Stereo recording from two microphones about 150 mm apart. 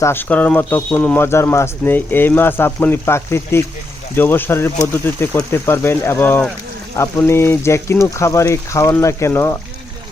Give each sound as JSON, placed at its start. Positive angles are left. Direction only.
{"t": 0.0, "sound": "speech", "side_deg": 15}